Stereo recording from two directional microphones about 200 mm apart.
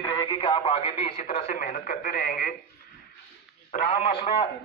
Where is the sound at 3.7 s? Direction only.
40° left (ahead or behind).